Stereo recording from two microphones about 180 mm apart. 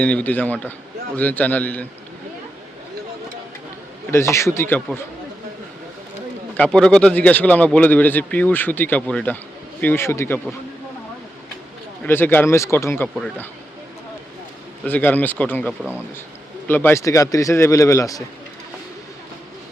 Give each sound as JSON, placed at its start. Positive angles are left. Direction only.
{"t": 0.0, "sound": "speech", "side_deg": 5}
{"t": 4.1, "sound": "speech", "side_deg": 15}
{"t": 6.6, "sound": "speech", "side_deg": 5}
{"t": 12.0, "sound": "speech", "side_deg": 10}
{"t": 14.8, "sound": "speech", "side_deg": 10}
{"t": 15.8, "sound": "speech", "side_deg": -10}
{"t": 16.6, "sound": "speech", "side_deg": 10}